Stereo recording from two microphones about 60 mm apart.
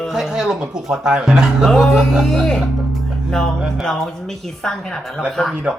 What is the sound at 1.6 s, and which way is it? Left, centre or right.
Speech, centre.